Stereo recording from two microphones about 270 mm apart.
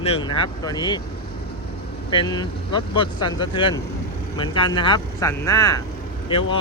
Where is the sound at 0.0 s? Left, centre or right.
Centre.